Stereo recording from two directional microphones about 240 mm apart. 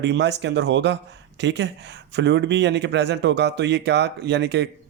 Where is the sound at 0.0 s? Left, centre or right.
Right.